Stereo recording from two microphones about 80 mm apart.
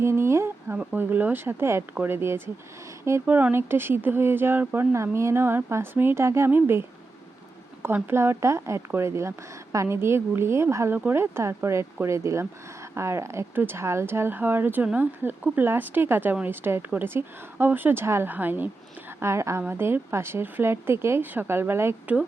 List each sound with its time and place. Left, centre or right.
0.0 s a woman's voice: right
8.1 s a woman's voice: right
19.2 s a woman's voice: right